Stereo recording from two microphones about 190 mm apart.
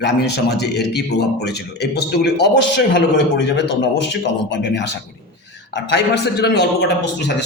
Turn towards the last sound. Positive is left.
turn(degrees=65)  # may be behind; listen again after turning